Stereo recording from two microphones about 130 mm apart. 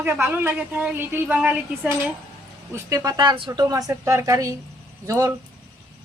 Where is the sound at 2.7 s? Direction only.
25° right (ahead or behind).